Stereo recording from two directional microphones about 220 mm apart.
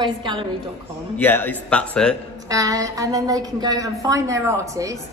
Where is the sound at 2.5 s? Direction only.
15° right (ahead or behind).